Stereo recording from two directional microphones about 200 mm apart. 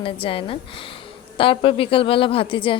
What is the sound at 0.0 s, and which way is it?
A woman's voice, 25° left (ahead or behind).